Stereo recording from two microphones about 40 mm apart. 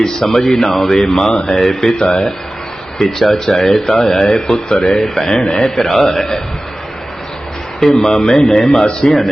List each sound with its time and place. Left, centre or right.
0.3 s a man's voice: centre
1.5 s speech: centre
3.0 s speech: centre
5.8 s speech: centre
7.8 s a man's voice: centre